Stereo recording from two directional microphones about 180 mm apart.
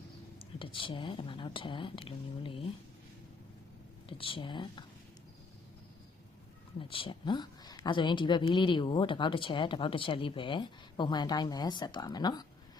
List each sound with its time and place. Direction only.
0.6 s speech: 30° left (ahead or behind)
4.2 s speech: 30° left (ahead or behind)
6.7 s speech: 30° left (ahead or behind)